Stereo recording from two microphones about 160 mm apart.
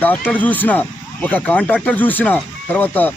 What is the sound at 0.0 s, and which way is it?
Speech, 10° left (ahead or behind).